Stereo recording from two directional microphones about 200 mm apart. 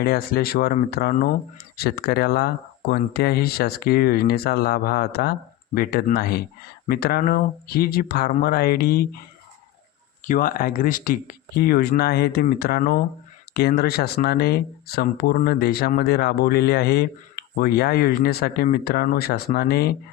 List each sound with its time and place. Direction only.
0.0 s speech: 50° left (ahead or behind)
10.2 s speech: 40° left (ahead or behind)